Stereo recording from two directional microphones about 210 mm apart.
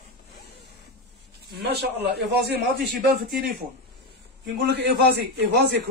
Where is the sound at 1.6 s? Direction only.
55° right (ahead or behind).